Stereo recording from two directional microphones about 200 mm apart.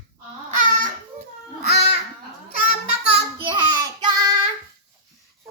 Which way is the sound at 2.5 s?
45° left (ahead or behind).